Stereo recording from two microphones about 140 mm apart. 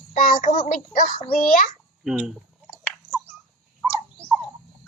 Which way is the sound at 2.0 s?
5° right (ahead or behind).